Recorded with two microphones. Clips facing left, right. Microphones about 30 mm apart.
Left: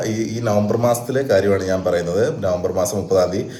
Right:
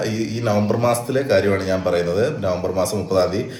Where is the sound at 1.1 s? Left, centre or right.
Right.